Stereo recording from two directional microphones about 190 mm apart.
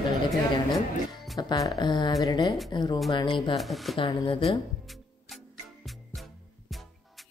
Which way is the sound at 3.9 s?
25° left (ahead or behind).